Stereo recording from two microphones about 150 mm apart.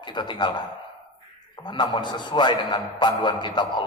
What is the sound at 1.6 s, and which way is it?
A man's voice, 30° left (ahead or behind).